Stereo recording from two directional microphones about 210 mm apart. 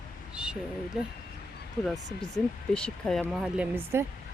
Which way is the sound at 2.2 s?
5° left (ahead or behind).